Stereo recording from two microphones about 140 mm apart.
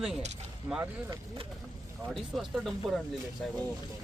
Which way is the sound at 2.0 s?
Centre (ahead or behind).